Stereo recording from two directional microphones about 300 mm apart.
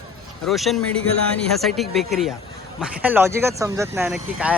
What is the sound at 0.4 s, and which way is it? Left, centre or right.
A man's voice, centre.